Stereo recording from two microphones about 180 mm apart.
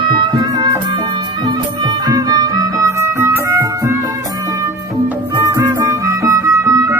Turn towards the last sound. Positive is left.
turn(degrees=-15)  # may be behind; listen again after turning